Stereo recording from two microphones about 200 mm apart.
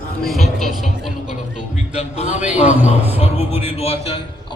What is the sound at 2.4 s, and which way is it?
Speech, 5° right (ahead or behind).